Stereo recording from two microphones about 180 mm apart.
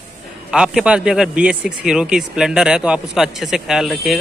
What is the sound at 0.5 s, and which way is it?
A man's voice, 5° right (ahead or behind).